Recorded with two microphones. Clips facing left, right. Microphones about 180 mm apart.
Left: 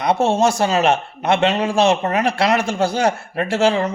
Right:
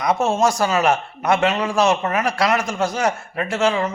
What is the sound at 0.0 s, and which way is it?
A man's voice, 30° left (ahead or behind).